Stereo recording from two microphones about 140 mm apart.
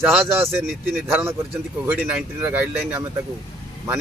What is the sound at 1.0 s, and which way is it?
Speech, 15° right (ahead or behind).